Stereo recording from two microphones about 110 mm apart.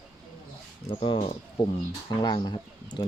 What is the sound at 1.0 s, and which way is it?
Speech, 50° left (ahead or behind).